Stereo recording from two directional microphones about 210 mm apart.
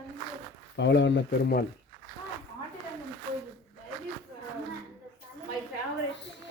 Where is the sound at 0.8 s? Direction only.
60° left (ahead or behind).